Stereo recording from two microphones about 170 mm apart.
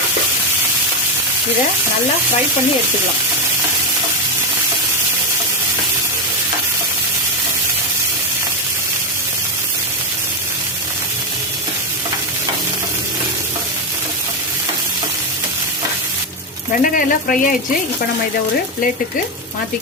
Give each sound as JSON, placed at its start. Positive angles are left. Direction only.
{"t": 16.7, "sound": "speech", "side_deg": 55}